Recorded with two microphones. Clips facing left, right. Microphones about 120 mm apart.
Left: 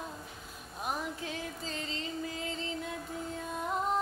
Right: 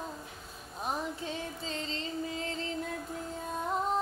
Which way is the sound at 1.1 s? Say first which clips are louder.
Right 2 dB; 30° right (ahead or behind).